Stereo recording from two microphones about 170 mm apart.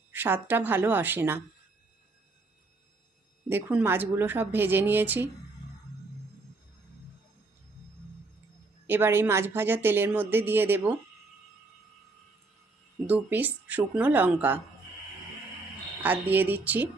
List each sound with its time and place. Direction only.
0.1 s speech: 10° right (ahead or behind)
3.5 s speech: 10° right (ahead or behind)
8.9 s speech: 15° right (ahead or behind)
13.1 s speech: 10° right (ahead or behind)
16.0 s speech: 10° right (ahead or behind)